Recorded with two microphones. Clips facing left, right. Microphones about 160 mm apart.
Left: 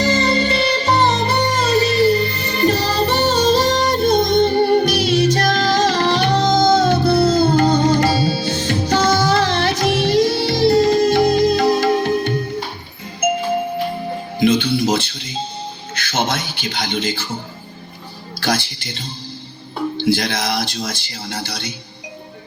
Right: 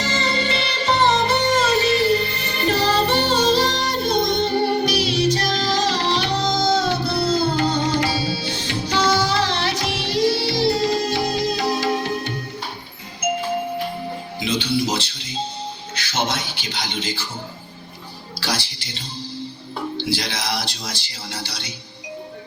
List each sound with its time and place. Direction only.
0.0 s music: 40° left (ahead or behind)
16.0 s a sound: 50° left (ahead or behind)
18.3 s music: 50° left (ahead or behind)
20.0 s speech: 50° left (ahead or behind)